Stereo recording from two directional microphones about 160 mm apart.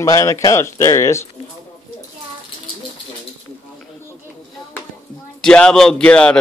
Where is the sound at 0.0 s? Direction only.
20° left (ahead or behind).